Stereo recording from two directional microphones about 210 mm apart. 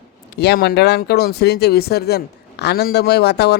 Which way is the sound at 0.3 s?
50° left (ahead or behind).